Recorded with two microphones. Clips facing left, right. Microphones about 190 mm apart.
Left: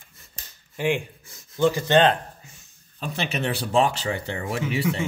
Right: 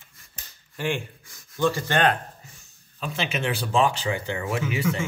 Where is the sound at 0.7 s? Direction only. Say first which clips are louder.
Left 4 dB; 15° left (ahead or behind).